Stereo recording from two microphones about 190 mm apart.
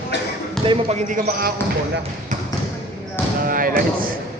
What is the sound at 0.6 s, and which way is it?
Speech, 25° right (ahead or behind).